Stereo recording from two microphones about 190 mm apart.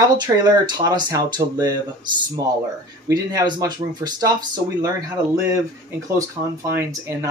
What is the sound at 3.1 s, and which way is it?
Speech, 20° right (ahead or behind).